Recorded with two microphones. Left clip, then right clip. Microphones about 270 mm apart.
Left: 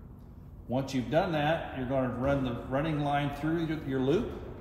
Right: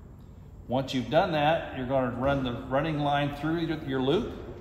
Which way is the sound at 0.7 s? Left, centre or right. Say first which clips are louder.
Right 4 dB; centre.